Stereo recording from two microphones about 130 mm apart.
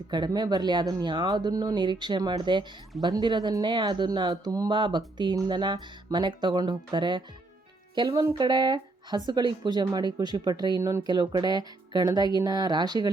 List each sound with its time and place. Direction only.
0.1 s speech: 35° right (ahead or behind)